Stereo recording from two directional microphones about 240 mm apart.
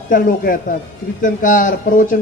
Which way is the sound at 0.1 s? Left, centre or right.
Left.